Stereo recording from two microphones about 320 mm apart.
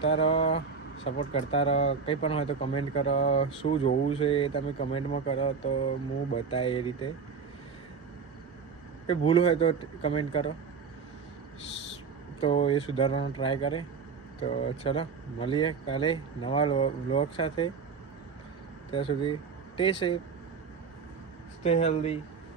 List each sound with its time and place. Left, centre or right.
0.0 s speech: centre
9.0 s speech: centre
12.4 s speech: centre
18.9 s speech: centre
21.6 s speech: centre